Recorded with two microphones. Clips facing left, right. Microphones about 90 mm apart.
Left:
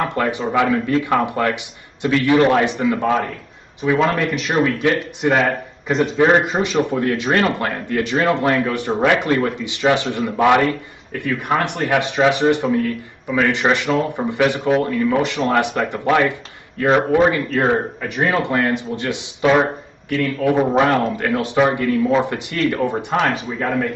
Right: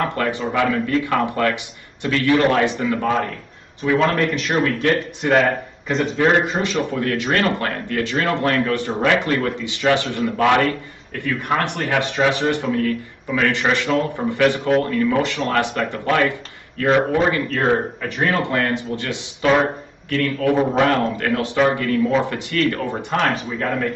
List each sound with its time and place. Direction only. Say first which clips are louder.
0.0 s a man's voice: left 1 dB; 15° left (ahead or behind)
4.0 s a man's voice: even; centre (ahead or behind)
6.1 s a man's voice: left 2 dB; 15° left (ahead or behind)
19.4 s speech: left 2 dB; 5° left (ahead or behind)
20.1 s a man's voice: left 1 dB; 15° left (ahead or behind)